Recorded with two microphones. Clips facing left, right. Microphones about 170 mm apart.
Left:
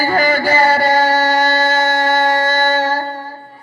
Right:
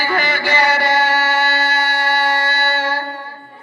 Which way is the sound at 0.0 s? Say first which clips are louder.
Left 5 dB; 40° left (ahead or behind).